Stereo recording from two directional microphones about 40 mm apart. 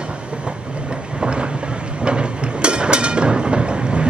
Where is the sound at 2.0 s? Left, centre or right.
Right.